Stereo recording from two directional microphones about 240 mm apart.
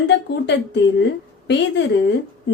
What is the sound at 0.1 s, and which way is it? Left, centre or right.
A woman's voice, left.